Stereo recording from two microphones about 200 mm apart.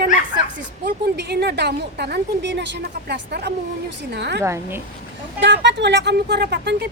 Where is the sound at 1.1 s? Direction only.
55° right (ahead or behind).